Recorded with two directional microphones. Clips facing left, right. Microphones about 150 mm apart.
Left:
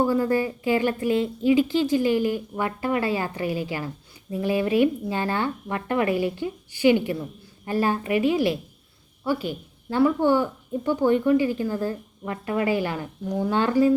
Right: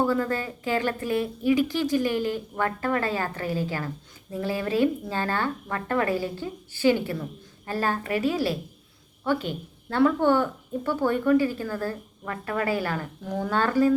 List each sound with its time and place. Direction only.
0.0 s a woman's voice: 15° left (ahead or behind)